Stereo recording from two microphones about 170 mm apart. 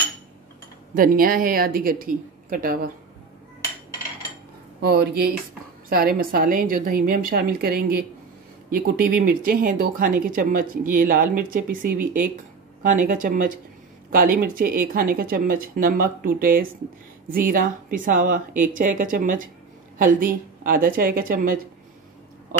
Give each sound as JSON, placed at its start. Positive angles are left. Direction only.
{"t": 0.9, "sound": "speech", "side_deg": -55}
{"t": 4.8, "sound": "speech", "side_deg": -70}